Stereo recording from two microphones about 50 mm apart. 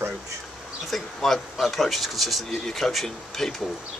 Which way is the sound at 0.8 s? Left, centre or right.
Centre.